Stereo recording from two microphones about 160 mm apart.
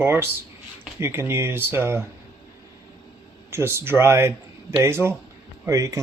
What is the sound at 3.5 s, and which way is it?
Speech, 15° right (ahead or behind).